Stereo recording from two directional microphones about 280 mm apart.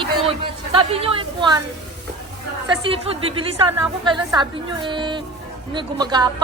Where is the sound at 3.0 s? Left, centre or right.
Centre.